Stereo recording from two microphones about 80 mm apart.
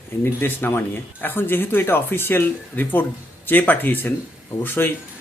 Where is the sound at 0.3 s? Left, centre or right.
Left.